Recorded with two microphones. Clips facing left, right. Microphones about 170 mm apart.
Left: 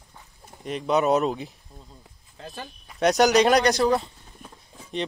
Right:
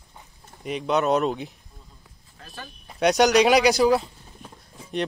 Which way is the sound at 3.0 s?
Centre (ahead or behind).